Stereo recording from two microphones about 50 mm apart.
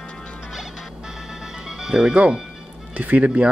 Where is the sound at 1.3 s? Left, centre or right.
Centre.